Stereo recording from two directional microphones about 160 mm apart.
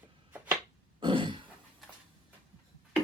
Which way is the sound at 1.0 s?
30° right (ahead or behind).